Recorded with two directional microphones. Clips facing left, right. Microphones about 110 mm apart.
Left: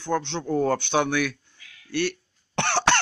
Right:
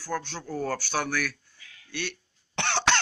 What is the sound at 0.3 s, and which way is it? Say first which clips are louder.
Speech: left 8 dB; 20° left (ahead or behind).